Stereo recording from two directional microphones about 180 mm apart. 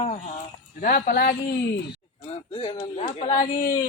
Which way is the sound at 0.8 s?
55° left (ahead or behind).